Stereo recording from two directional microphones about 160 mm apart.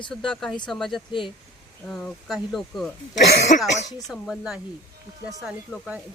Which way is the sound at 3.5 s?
50° left (ahead or behind).